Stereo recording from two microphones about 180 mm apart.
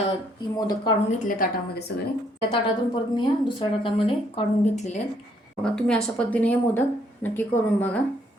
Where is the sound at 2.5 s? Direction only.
25° left (ahead or behind).